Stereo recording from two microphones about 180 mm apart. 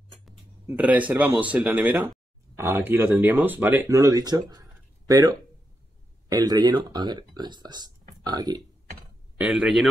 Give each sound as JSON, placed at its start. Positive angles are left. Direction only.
{"t": 0.7, "sound": "speech", "side_deg": -10}
{"t": 9.4, "sound": "speech", "side_deg": -5}